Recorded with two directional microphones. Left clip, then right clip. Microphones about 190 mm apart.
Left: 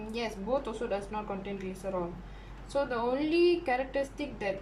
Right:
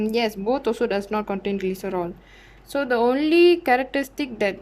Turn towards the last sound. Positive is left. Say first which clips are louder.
# right 10 dB
turn(degrees=-60)  # may be behind; listen again after turning